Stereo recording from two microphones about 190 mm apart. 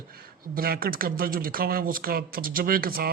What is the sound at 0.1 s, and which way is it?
Speech, 50° right (ahead or behind).